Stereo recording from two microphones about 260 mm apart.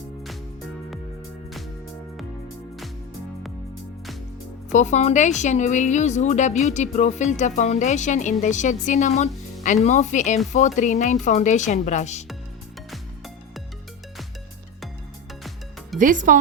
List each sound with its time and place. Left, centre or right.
4.7 s speech: left
16.0 s speech: right